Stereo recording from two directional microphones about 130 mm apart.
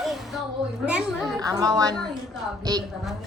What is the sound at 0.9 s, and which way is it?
Speech, 10° right (ahead or behind).